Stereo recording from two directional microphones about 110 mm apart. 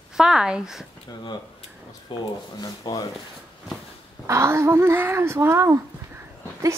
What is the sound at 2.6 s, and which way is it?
Speech, 35° left (ahead or behind).